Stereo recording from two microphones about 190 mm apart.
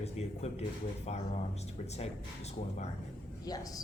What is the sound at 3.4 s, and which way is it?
Speech, 20° left (ahead or behind).